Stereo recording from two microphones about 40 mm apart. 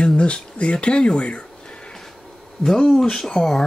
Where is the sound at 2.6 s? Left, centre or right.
Centre.